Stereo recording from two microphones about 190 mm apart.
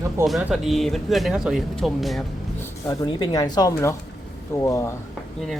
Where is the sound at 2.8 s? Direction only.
20° left (ahead or behind).